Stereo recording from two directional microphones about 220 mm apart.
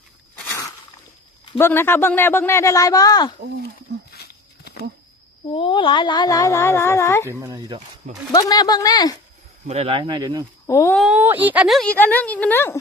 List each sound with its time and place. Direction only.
1.5 s speech: 10° left (ahead or behind)
4.1 s a sound: 45° left (ahead or behind)
5.5 s speech: 20° left (ahead or behind)
7.3 s speech: 15° right (ahead or behind)
8.3 s speech: 15° left (ahead or behind)
9.6 s speech: 30° right (ahead or behind)
10.7 s speech: 10° left (ahead or behind)
11.0 s a woman's voice: 5° right (ahead or behind); by 12.8 s 10° left (ahead or behind)